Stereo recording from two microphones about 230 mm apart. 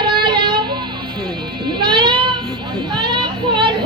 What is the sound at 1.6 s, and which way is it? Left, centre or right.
Children playing, centre.